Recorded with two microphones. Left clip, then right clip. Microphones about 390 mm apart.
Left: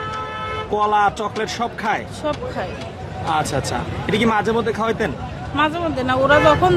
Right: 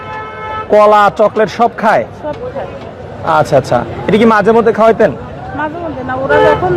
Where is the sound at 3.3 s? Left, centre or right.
Right.